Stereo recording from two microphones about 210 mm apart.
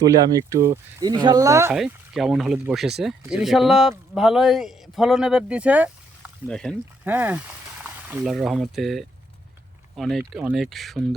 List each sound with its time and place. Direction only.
0.0 s speech: 15° right (ahead or behind)
1.7 s speech: centre (ahead or behind)
7.0 s speech: 10° right (ahead or behind)